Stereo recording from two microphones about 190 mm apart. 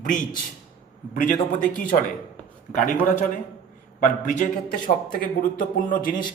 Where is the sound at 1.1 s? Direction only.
45° left (ahead or behind).